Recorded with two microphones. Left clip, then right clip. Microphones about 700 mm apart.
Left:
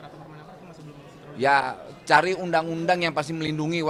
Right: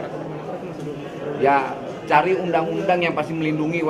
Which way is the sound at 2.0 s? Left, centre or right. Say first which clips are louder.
Right 2 dB; left.